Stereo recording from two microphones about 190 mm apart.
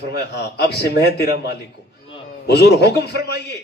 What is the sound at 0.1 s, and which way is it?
A man's voice, 60° left (ahead or behind).